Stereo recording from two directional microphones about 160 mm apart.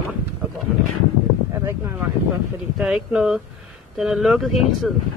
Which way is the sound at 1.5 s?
15° right (ahead or behind).